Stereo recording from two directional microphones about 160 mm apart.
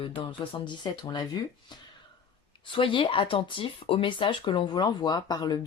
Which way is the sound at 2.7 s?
30° left (ahead or behind).